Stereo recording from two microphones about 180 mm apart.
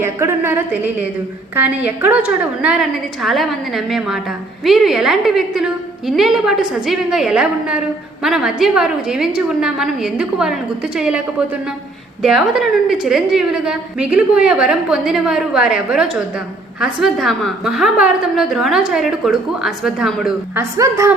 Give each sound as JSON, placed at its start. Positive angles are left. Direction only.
{"t": 0.0, "sound": "a woman's voice", "side_deg": -15}
{"t": 20.6, "sound": "a woman's voice", "side_deg": -15}